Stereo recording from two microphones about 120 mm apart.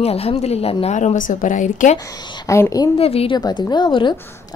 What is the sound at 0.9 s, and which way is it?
A woman's voice, 90° left.